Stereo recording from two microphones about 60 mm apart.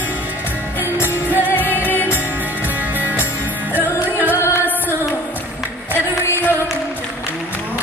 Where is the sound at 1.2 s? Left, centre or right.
Right.